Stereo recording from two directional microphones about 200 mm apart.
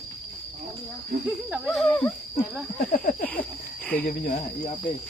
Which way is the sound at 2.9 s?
45° left (ahead or behind).